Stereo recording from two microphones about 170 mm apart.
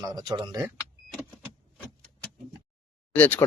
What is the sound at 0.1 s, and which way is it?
Speech, 25° right (ahead or behind).